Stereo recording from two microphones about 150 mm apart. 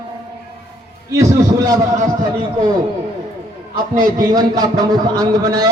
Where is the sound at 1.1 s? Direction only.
20° right (ahead or behind).